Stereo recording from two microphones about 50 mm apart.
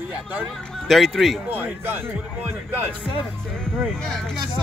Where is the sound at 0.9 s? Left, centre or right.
Centre.